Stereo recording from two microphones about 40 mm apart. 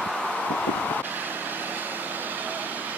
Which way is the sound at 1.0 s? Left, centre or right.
Right.